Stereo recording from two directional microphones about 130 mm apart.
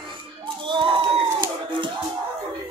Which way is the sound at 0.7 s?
40° right (ahead or behind).